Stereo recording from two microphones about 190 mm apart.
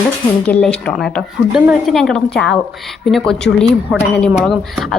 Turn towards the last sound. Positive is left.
turn(degrees=0)  # may be behind; listen again after turning